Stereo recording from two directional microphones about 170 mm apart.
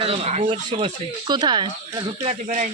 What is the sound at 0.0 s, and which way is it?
Speech, 35° right (ahead or behind).